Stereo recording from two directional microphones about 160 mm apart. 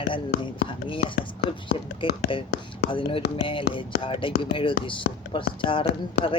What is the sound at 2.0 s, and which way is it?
Speech, 30° left (ahead or behind).